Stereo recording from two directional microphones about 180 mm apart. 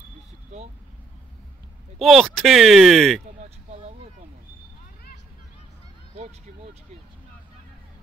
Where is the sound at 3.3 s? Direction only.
40° right (ahead or behind).